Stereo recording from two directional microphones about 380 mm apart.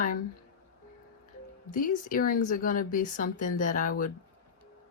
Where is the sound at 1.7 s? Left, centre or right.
Centre.